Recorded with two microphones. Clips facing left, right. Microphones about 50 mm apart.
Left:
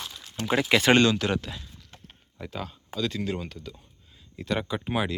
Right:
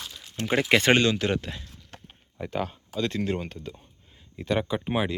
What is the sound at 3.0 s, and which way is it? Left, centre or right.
Speech, right.